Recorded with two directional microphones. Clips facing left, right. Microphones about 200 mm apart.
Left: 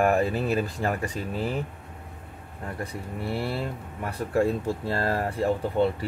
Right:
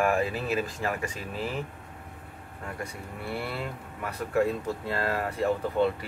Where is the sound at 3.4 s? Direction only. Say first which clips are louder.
Left 4 dB; 30° left (ahead or behind).